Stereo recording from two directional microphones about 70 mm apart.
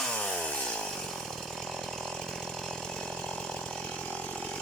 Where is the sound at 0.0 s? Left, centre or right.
Centre.